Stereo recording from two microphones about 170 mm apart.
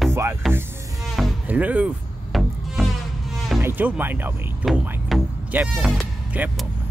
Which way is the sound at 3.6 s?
10° right (ahead or behind).